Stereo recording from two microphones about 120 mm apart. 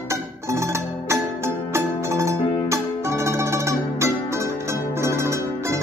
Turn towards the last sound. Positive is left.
turn(degrees=-25)  # may be behind; listen again after turning